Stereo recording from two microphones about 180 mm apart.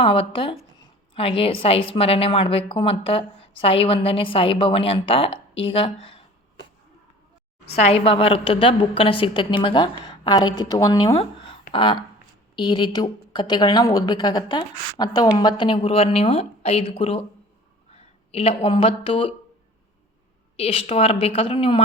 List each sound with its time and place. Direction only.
0.0 s a woman's voice: 30° left (ahead or behind)
7.8 s a woman's voice: 35° left (ahead or behind)
11.1 s a woman's voice: 35° left (ahead or behind)
20.6 s a woman's voice: 35° left (ahead or behind)